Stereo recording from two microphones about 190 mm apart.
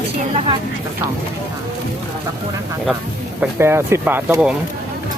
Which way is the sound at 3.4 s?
10° right (ahead or behind).